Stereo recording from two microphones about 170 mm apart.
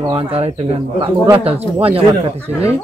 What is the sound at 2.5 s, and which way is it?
Speech, 15° left (ahead or behind).